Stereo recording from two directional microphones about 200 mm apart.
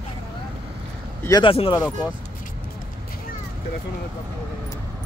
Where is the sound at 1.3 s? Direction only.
25° left (ahead or behind).